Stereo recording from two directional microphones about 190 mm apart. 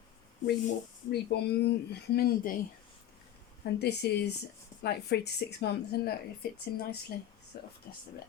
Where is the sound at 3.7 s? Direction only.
60° left (ahead or behind).